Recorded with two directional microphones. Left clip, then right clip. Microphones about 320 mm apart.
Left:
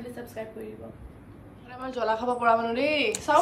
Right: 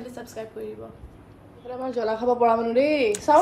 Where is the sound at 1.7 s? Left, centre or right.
Centre.